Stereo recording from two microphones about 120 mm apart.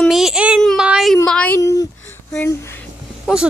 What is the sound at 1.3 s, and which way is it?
Speech, 10° left (ahead or behind).